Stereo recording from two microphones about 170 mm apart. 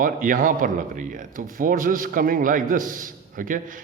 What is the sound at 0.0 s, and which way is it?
A man's voice, 55° right (ahead or behind).